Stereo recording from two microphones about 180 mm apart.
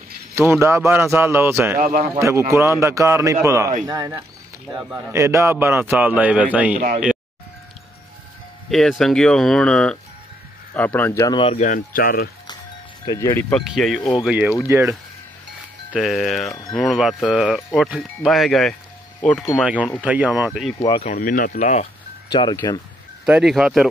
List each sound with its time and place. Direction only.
0.4 s a man's voice: 15° right (ahead or behind)
1.8 s speech: 50° right (ahead or behind)
2.1 s a man's voice: 15° right (ahead or behind)
8.6 s speech: centre (ahead or behind); by 11.5 s 25° left (ahead or behind)
11.5 s speech: 45° left (ahead or behind)
13.0 s speech: 20° left (ahead or behind)
13.7 s a man's voice: centre (ahead or behind)
15.9 s speech: centre (ahead or behind)
16.4 s speech: 20° left (ahead or behind)
16.7 s speech: centre (ahead or behind)
19.6 s a man's voice: 5° right (ahead or behind)
21.0 s speech: 45° left (ahead or behind)
22.3 s speech: 25° left (ahead or behind)
23.2 s speech: 5° right (ahead or behind)